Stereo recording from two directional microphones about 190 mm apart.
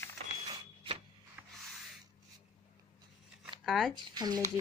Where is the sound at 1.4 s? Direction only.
10° right (ahead or behind).